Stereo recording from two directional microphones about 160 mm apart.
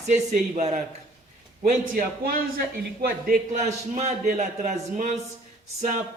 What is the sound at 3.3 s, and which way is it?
A man's voice, 45° right (ahead or behind).